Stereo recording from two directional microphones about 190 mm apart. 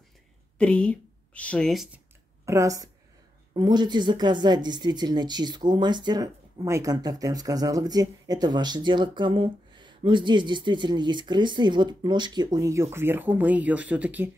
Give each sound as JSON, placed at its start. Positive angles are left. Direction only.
{"t": 0.6, "sound": "speech", "side_deg": 5}
{"t": 2.4, "sound": "a woman's voice", "side_deg": -15}